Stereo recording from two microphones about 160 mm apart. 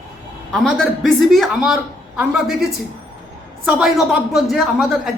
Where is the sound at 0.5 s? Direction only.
Centre (ahead or behind).